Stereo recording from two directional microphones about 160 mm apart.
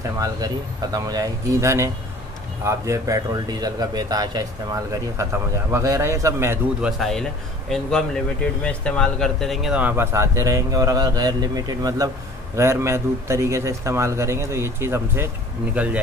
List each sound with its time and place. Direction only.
0.9 s speech: 25° right (ahead or behind)
6.8 s a man's voice: centre (ahead or behind)